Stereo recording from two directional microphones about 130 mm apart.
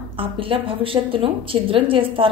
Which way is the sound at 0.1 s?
45° right (ahead or behind).